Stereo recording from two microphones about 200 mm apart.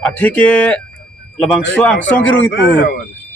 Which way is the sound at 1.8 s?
5° left (ahead or behind).